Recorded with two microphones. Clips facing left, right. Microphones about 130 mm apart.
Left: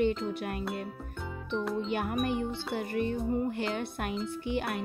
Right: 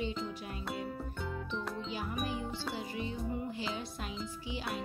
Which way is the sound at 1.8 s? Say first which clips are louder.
Left 7 dB; 60° left (ahead or behind).